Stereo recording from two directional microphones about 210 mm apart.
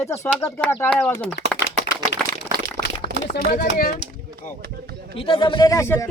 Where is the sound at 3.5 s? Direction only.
45° left (ahead or behind).